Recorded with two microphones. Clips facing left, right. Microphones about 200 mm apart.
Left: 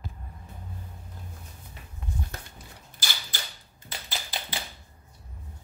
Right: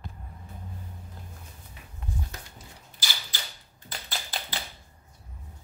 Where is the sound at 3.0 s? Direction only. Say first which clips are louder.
Left 1 dB; 55° left (ahead or behind).